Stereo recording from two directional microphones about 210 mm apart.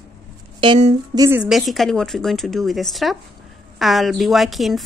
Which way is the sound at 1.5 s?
Centre (ahead or behind).